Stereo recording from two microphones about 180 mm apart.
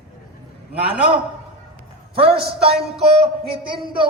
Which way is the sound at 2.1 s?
30° right (ahead or behind).